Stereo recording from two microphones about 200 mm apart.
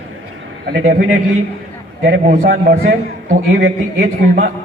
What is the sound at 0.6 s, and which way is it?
Speech, 45° right (ahead or behind).